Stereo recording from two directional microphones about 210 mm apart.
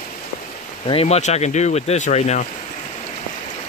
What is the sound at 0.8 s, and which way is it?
Speech, 30° left (ahead or behind).